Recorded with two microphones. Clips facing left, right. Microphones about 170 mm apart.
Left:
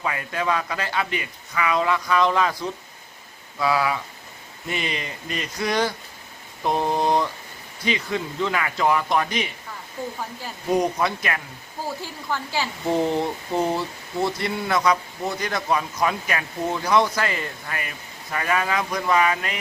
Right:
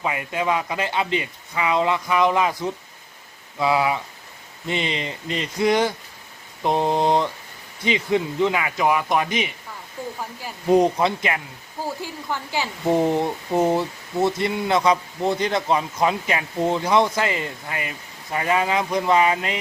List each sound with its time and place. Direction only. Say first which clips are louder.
0.0 s a man's voice: right 2 dB; 20° right (ahead or behind)
10.7 s speech: right 5 dB; 25° right (ahead or behind)